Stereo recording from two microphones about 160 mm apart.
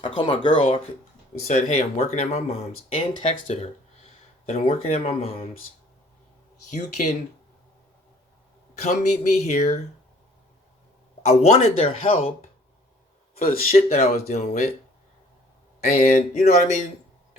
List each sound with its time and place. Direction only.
0.0 s speech: 30° left (ahead or behind)
1.5 s speech: 45° left (ahead or behind)
6.7 s speech: 45° left (ahead or behind)
8.8 s speech: 45° left (ahead or behind)
11.3 s speech: 40° left (ahead or behind)
13.7 s speech: 40° left (ahead or behind)
16.0 s speech: 45° left (ahead or behind)